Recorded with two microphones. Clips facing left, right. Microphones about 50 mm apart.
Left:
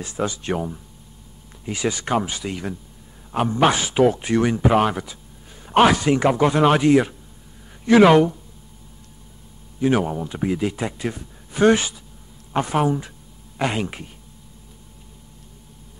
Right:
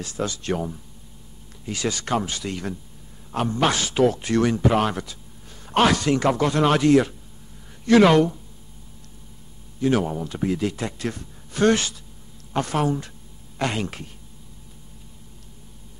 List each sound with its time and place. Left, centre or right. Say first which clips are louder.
0.0 s speech: left 2 dB; centre
9.8 s speech: left 2 dB; centre